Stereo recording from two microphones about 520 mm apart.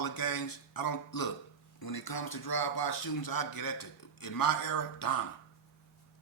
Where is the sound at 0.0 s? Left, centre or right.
Left.